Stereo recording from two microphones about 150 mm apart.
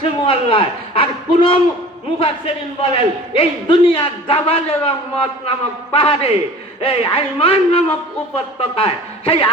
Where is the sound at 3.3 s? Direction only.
40° left (ahead or behind).